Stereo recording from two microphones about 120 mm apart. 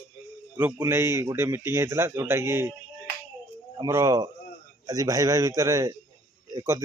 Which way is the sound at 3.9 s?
25° right (ahead or behind).